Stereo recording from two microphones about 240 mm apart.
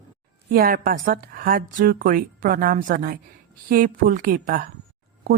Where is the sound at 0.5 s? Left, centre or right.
Right.